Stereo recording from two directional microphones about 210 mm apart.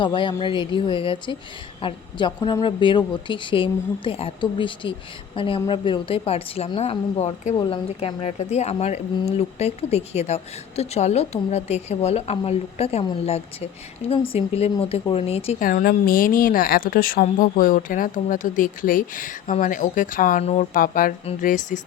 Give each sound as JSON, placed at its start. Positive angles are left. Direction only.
{"t": 0.0, "sound": "a woman's voice", "side_deg": 25}
{"t": 15.6, "sound": "a woman's voice", "side_deg": 45}